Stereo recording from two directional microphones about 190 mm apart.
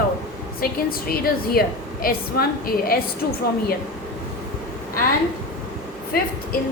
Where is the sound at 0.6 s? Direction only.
50° left (ahead or behind).